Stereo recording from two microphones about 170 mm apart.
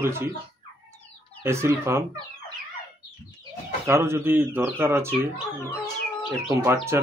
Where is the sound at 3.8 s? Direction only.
15° right (ahead or behind).